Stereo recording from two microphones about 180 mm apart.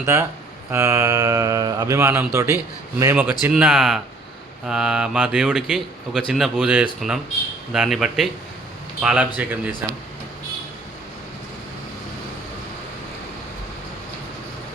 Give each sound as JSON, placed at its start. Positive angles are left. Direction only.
{"t": 0.0, "sound": "speech", "side_deg": -15}